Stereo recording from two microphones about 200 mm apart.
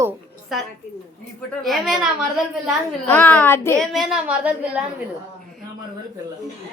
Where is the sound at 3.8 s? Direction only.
Centre (ahead or behind).